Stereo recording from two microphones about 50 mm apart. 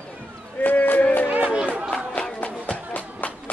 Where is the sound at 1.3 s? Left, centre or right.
Right.